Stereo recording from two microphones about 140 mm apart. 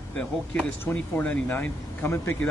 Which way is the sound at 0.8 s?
10° left (ahead or behind).